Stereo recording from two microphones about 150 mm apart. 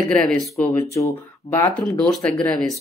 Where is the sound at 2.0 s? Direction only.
5° left (ahead or behind).